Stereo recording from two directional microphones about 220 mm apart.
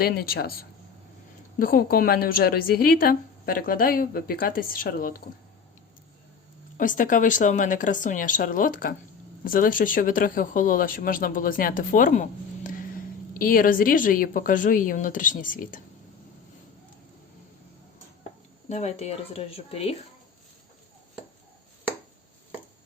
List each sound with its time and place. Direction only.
0.0 s speech: 45° left (ahead or behind)
1.5 s a woman's voice: 40° left (ahead or behind)
6.7 s a woman's voice: 35° left (ahead or behind)
18.7 s speech: 30° left (ahead or behind)